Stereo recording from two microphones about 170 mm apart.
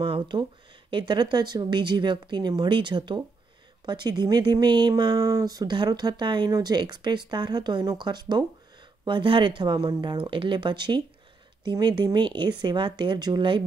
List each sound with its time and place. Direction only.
0.0 s speech: 30° right (ahead or behind)